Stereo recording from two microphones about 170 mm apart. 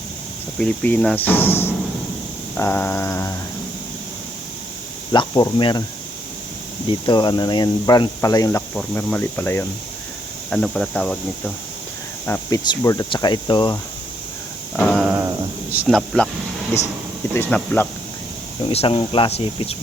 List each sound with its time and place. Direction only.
0.6 s speech: 5° left (ahead or behind)
5.1 s speech: 25° left (ahead or behind)
7.0 s speech: 25° left (ahead or behind)
8.7 s speech: 10° left (ahead or behind); by 13.7 s 25° left (ahead or behind)
14.8 s a sound: 5° left (ahead or behind)
15.0 s a sound: 15° right (ahead or behind)
15.7 s speech: 5° right (ahead or behind)
17.3 s speech: 10° left (ahead or behind)
18.7 s speech: 35° left (ahead or behind)